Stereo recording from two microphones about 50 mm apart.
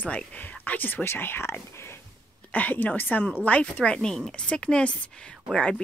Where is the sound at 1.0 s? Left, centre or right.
Left.